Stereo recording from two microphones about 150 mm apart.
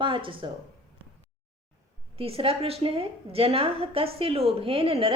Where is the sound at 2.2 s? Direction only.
40° right (ahead or behind).